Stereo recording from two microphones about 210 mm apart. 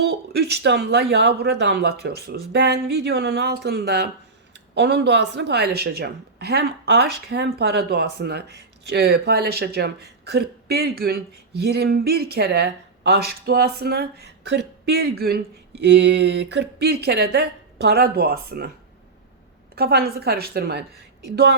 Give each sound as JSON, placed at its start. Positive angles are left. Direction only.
{"t": 0.0, "sound": "a woman's voice", "side_deg": -50}
{"t": 19.7, "sound": "a woman's voice", "side_deg": -50}